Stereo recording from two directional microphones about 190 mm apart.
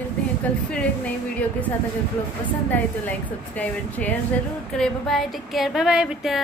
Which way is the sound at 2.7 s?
10° left (ahead or behind).